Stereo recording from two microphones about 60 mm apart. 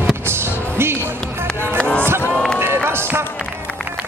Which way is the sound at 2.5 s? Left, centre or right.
Right.